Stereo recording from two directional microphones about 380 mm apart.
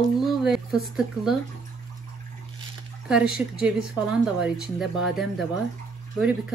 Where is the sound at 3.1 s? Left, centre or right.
Centre.